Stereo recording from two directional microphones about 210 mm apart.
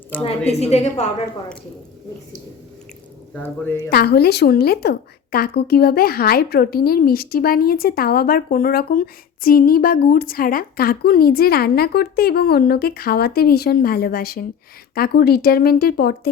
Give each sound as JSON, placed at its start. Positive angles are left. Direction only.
{"t": 0.3, "sound": "a woman's voice", "side_deg": 30}
{"t": 3.4, "sound": "speech", "side_deg": 10}
{"t": 3.8, "sound": "a woman's voice", "side_deg": 50}